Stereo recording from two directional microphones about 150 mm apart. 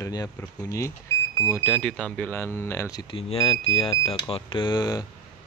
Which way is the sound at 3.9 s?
25° left (ahead or behind).